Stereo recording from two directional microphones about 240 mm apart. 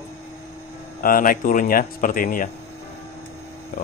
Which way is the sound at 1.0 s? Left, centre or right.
Left.